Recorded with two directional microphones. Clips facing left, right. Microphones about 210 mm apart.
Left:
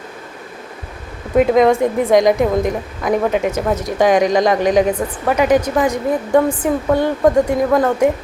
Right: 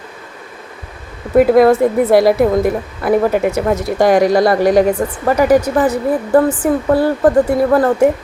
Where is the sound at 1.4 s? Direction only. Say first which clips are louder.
Right 3 dB; 5° right (ahead or behind).